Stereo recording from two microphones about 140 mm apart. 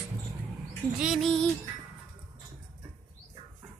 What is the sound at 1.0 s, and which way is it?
Music, 5° right (ahead or behind).